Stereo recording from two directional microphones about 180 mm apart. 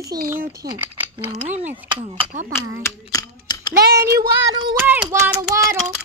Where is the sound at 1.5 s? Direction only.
10° right (ahead or behind).